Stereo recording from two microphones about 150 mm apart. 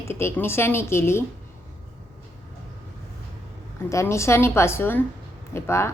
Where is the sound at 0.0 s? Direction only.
15° left (ahead or behind).